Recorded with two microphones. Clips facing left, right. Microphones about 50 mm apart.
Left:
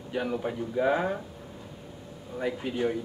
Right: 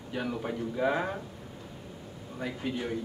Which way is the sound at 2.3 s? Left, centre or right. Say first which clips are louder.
Left 4 dB; centre.